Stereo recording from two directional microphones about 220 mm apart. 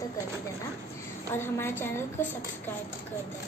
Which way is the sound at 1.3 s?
10° left (ahead or behind).